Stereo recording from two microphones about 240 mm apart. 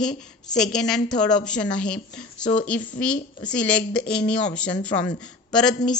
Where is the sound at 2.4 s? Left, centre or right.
Left.